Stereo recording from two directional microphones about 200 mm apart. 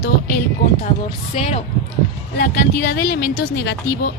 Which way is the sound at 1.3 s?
30° left (ahead or behind).